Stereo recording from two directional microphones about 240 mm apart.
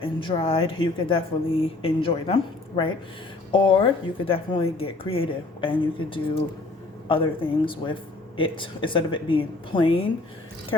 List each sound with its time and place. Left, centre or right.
0.0 s speech: left